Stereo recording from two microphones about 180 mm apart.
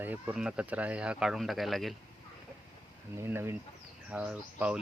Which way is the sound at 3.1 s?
15° right (ahead or behind).